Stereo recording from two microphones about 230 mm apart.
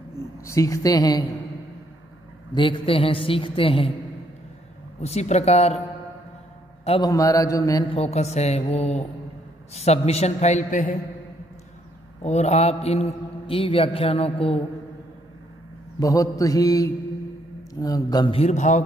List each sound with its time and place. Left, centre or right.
0.5 s mantra: centre
2.5 s a man's voice: left
5.0 s a man's voice: left
6.8 s a sound: left
7.1 s a man's voice: centre; by 11.0 s left
12.2 s a man's voice: left
16.0 s mantra: centre
17.7 s a man's voice: centre; by 18.9 s left